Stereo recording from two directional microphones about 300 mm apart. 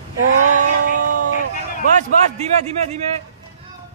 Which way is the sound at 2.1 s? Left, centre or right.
Right.